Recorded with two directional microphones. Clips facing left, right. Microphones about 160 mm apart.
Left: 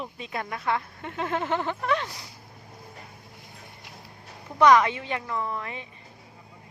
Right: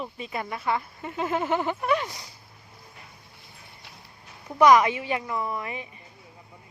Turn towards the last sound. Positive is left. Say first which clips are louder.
# right 2 dB
turn(degrees=-10)  # may be behind; listen again after turning